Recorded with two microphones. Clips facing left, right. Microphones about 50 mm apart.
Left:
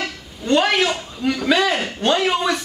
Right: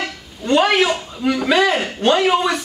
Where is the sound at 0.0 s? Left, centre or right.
Centre.